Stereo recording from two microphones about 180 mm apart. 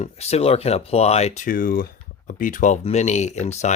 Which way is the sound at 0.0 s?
35° left (ahead or behind).